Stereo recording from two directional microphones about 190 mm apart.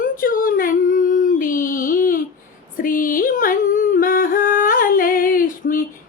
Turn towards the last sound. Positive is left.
turn(degrees=45)  # may be behind; listen again after turning